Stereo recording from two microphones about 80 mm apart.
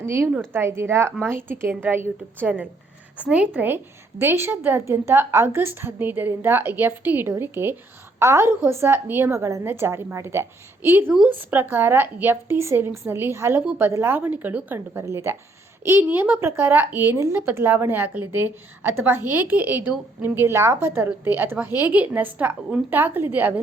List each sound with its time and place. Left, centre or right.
0.0 s a woman's voice: right
15.0 s a woman's voice: right